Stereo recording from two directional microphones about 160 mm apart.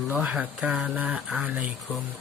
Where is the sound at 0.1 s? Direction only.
10° right (ahead or behind).